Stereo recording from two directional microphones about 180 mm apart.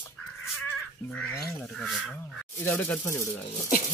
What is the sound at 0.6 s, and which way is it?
Crow, 10° left (ahead or behind).